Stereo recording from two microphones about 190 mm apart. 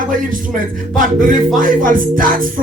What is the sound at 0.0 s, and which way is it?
Speech, 45° right (ahead or behind).